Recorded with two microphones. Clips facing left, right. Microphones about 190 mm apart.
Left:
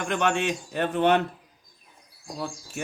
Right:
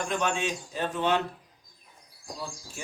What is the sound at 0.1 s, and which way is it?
Speech, 65° left (ahead or behind).